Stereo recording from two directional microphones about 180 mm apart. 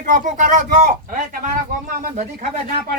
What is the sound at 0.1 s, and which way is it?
Speech, 45° right (ahead or behind).